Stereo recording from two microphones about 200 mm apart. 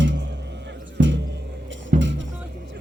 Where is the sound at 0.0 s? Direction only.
65° right (ahead or behind).